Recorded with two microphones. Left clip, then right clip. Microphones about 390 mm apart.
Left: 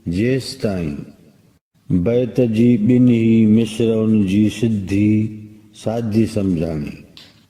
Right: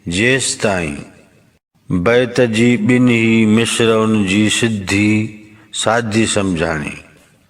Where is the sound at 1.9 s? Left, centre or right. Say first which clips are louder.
Right 5 dB; right.